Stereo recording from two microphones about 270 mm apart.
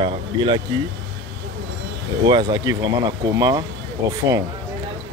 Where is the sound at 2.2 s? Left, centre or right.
Centre.